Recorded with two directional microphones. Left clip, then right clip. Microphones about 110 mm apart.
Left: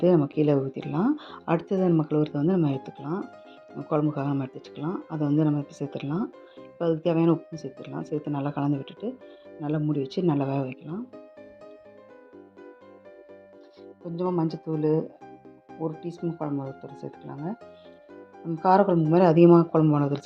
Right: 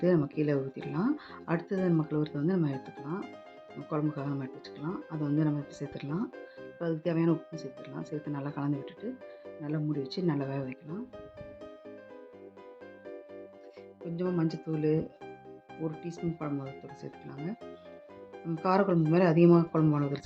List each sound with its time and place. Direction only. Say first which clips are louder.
0.0 s speech: left 6 dB; 50° left (ahead or behind)
4.8 s speech: left 6 dB; 15° left (ahead or behind)
5.2 s speech: left 6 dB; 45° left (ahead or behind)
14.2 s speech: left 5 dB; 20° left (ahead or behind)
18.6 s speech: left 7 dB; 25° left (ahead or behind)
19.2 s speech: left 7 dB; 40° left (ahead or behind)